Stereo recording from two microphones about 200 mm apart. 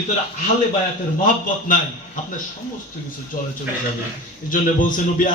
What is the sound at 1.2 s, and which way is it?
Speech, 40° left (ahead or behind).